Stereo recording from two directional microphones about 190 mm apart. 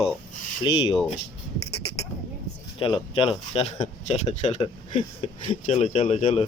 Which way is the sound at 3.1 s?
30° left (ahead or behind).